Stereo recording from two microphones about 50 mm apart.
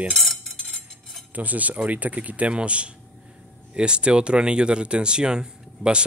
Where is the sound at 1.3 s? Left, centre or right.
Right.